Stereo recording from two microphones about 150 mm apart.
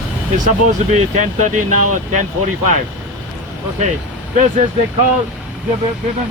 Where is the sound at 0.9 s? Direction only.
55° right (ahead or behind).